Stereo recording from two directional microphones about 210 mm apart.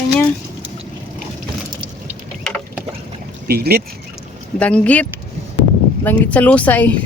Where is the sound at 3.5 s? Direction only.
50° right (ahead or behind).